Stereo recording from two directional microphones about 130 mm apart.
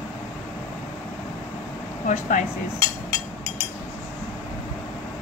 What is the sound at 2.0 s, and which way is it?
Speech, 80° left.